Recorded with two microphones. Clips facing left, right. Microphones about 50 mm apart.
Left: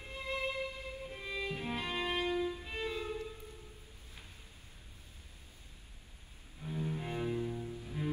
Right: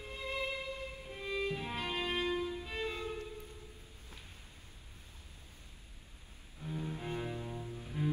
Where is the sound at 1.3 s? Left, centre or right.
Left.